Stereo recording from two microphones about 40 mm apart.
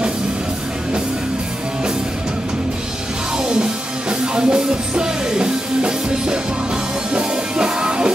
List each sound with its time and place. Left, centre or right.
3.4 s music: centre